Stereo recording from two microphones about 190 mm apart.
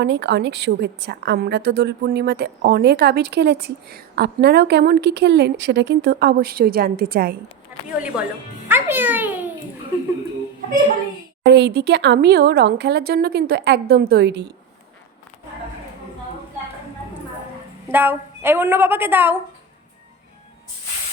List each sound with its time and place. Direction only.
0.0 s a woman's voice: 65° right (ahead or behind)
8.0 s a child's voice: 5° right (ahead or behind)
11.4 s a woman's voice: 60° right (ahead or behind)
17.8 s a woman's voice: 10° right (ahead or behind)